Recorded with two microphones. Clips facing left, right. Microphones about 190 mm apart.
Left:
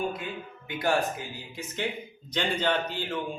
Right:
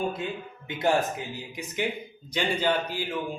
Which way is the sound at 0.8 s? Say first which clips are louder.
Right 2 dB; 20° right (ahead or behind).